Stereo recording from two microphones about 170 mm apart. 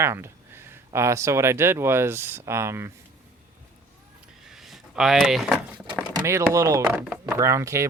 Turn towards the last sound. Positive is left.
turn(degrees=-20)  # may be behind; listen again after turning